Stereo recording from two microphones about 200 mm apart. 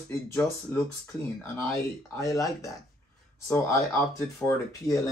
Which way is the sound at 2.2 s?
15° left (ahead or behind).